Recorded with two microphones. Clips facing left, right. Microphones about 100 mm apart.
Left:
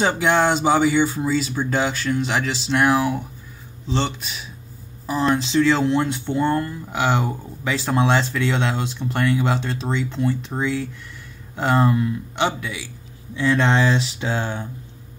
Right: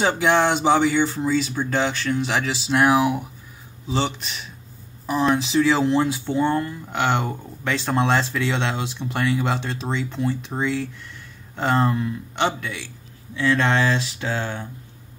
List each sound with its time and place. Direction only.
0.0 s speech: centre (ahead or behind)
13.4 s speech: 20° left (ahead or behind)